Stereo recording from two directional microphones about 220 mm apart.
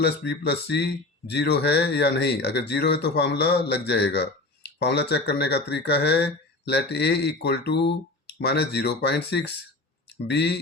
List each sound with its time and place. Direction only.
0.0 s speech: 50° left (ahead or behind)